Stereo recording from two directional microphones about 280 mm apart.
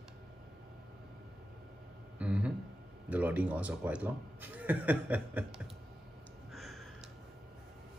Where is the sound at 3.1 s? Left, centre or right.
Centre.